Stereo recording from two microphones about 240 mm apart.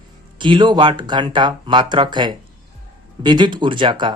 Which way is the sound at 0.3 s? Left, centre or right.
Centre.